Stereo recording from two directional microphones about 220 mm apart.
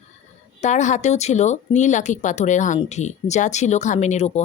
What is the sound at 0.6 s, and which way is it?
Speech, 35° left (ahead or behind).